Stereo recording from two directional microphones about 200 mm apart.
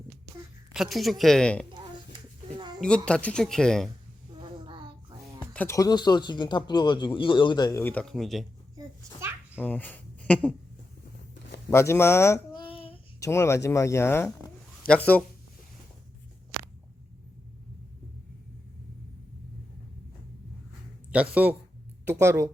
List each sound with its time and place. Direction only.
0.7 s speech: centre (ahead or behind)
2.6 s a sound: 20° right (ahead or behind)
2.8 s speech: 5° left (ahead or behind)
4.4 s music: 25° right (ahead or behind)
5.5 s speech: 15° left (ahead or behind)
9.6 s speech: 10° left (ahead or behind)
11.7 s speech: 15° left (ahead or behind)
12.5 s child singing: 25° left (ahead or behind)
13.1 s speech: 15° left (ahead or behind)
21.1 s speech: 5° right (ahead or behind)